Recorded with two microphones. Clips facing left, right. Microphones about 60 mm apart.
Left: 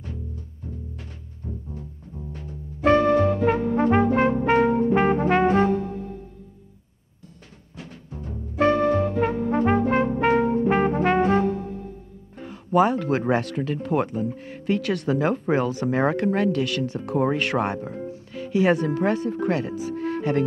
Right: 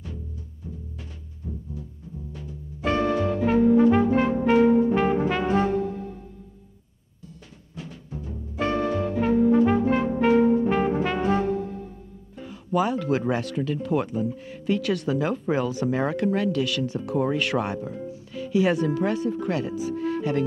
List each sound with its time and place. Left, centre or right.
2.3 s music: left
7.7 s timpani: left
9.2 s brass instrument: left
12.4 s speech: left